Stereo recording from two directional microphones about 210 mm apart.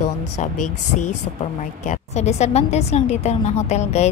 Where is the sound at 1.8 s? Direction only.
35° left (ahead or behind).